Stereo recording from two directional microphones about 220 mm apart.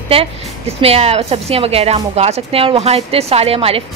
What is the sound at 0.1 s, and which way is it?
A woman's voice, 25° right (ahead or behind).